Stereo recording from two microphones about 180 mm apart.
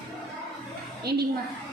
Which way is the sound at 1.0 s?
60° right (ahead or behind).